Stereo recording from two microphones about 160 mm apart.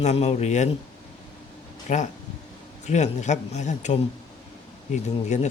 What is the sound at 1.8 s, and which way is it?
Speech, 50° left (ahead or behind).